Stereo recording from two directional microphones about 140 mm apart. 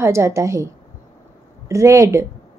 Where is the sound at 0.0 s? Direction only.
20° right (ahead or behind).